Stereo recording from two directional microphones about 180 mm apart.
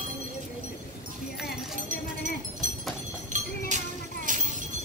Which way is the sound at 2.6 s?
45° right (ahead or behind).